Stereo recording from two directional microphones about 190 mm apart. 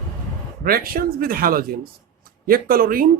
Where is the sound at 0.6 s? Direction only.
50° right (ahead or behind).